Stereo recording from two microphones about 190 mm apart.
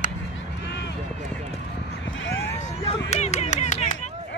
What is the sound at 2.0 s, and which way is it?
Vehicle, 80° left.